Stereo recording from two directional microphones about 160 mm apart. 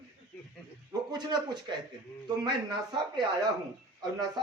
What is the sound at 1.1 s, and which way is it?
A man's voice, 25° right (ahead or behind).